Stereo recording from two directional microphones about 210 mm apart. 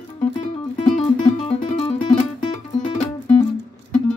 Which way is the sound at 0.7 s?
30° left (ahead or behind).